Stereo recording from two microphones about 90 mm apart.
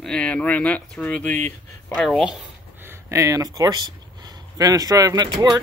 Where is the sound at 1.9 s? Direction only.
Centre (ahead or behind).